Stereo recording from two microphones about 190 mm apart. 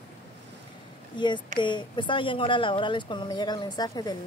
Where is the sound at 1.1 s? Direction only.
25° left (ahead or behind).